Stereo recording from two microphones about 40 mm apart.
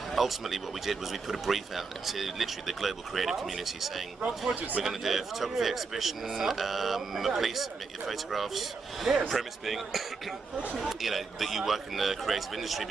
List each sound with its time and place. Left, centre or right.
0.1 s speech: centre
4.6 s a man's voice: right
4.8 s speech: centre